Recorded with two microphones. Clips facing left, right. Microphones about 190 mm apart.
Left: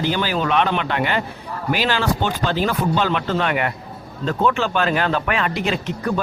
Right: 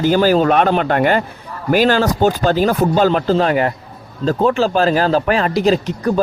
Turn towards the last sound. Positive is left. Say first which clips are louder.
# right 6 dB
turn(degrees=-35)  # may be behind; listen again after turning